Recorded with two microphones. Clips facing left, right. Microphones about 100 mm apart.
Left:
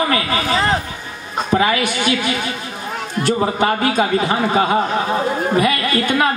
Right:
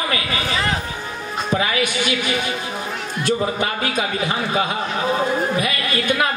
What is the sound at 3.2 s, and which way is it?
A man's voice, 30° left (ahead or behind).